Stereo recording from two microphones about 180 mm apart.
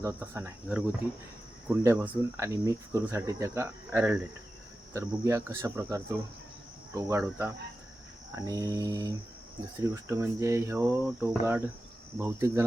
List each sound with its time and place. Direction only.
0.0 s speech: 15° right (ahead or behind)
8.4 s mantra: 20° right (ahead or behind)
9.9 s speech: 15° right (ahead or behind)